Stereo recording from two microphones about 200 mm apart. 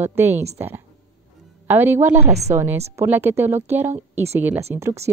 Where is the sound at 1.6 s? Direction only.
10° right (ahead or behind).